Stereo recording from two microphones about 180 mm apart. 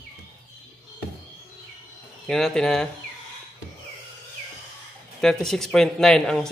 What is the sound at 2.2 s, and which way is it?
Speech, 5° left (ahead or behind).